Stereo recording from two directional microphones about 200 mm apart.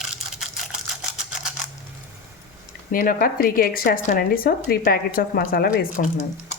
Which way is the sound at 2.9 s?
45° left (ahead or behind).